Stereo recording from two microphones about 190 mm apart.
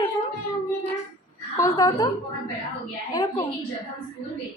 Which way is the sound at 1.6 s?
20° left (ahead or behind).